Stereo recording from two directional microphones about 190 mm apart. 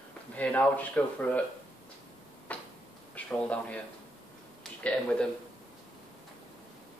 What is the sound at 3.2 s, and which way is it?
Speech, 5° left (ahead or behind).